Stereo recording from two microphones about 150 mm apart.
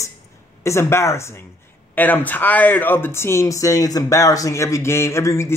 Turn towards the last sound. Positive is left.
turn(degrees=20)  # may be behind; listen again after turning